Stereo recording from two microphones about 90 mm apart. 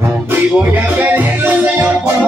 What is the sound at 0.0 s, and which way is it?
Music, 20° right (ahead or behind).